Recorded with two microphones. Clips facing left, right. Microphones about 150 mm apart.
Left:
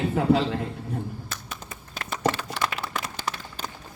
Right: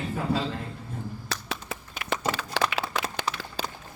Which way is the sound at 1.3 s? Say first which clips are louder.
Right 5 dB; 90° right.